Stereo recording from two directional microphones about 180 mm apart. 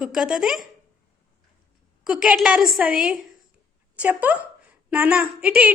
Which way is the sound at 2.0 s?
5° right (ahead or behind).